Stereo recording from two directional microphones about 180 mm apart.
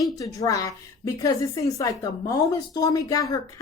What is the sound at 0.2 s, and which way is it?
A woman's voice, 20° left (ahead or behind).